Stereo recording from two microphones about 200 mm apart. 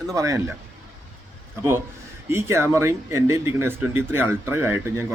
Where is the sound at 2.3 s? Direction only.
15° right (ahead or behind).